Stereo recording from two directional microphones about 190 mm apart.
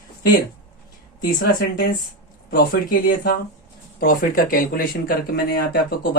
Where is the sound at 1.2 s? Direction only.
50° left (ahead or behind).